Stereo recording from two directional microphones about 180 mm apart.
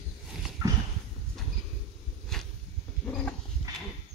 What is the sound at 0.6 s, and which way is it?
Horse, 15° right (ahead or behind).